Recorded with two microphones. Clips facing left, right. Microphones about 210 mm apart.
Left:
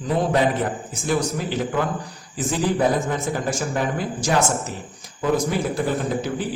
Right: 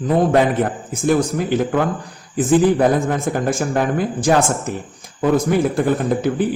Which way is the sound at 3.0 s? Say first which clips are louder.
Right 5 dB; 55° right (ahead or behind).